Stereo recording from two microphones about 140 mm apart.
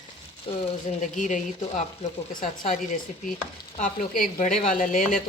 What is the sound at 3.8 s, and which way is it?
Speech, 65° left (ahead or behind).